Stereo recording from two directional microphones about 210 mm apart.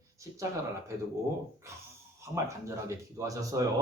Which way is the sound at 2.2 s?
15° right (ahead or behind).